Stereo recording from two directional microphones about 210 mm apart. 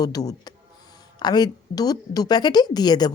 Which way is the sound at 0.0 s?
15° left (ahead or behind).